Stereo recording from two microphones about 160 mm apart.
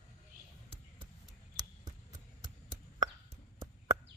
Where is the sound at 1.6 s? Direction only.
25° right (ahead or behind).